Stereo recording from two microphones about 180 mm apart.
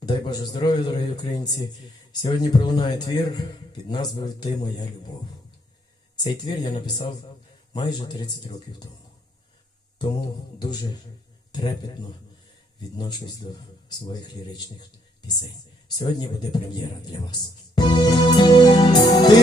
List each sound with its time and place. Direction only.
0.0 s speech: 25° left (ahead or behind)
6.2 s speech: 25° left (ahead or behind)
10.6 s speech: 25° left (ahead or behind)
13.0 s speech: 25° left (ahead or behind)
16.0 s speech: 25° left (ahead or behind)
17.7 s music: 25° left (ahead or behind)